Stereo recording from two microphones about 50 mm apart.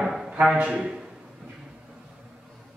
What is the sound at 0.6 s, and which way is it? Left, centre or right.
Speech, right.